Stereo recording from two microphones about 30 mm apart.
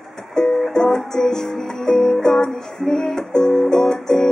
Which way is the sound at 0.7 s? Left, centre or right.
Centre.